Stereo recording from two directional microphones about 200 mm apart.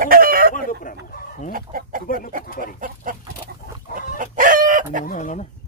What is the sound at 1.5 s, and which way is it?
Chicken, 45° right (ahead or behind).